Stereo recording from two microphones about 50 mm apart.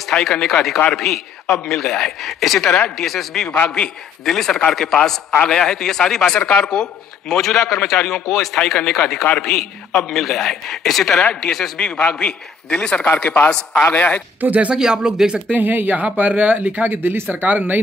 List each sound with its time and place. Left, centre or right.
0.1 s a man's voice: centre
3.4 s speech: left
4.2 s a man's voice: centre
8.3 s speech: centre
8.5 s a man's voice: centre
11.8 s a man's voice: centre
14.4 s speech: right
14.7 s speech: centre
15.5 s speech: right